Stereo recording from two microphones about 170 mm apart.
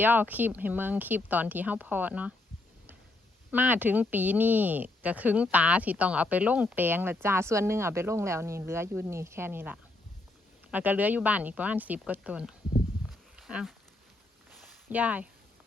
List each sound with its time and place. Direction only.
0.0 s speech: 10° right (ahead or behind)
3.5 s speech: 10° right (ahead or behind)
13.3 s a sound: 5° right (ahead or behind)
14.8 s speech: 10° right (ahead or behind)